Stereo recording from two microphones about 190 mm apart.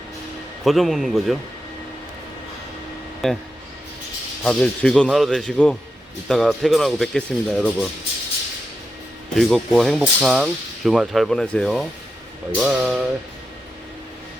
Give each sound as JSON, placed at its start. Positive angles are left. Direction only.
{"t": 0.6, "sound": "speech", "side_deg": 0}
{"t": 3.2, "sound": "speech", "side_deg": 0}
{"t": 4.4, "sound": "speech", "side_deg": 5}
{"t": 9.3, "sound": "speech", "side_deg": 0}